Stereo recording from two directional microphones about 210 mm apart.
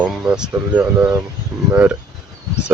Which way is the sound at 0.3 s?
5° right (ahead or behind).